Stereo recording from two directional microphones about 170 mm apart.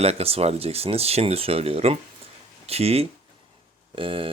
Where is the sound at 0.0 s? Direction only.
35° right (ahead or behind).